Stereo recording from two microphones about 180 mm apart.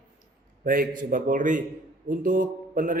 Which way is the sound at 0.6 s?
50° right (ahead or behind).